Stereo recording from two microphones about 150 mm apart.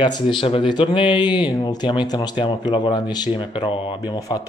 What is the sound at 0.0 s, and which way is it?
Speech, 30° left (ahead or behind).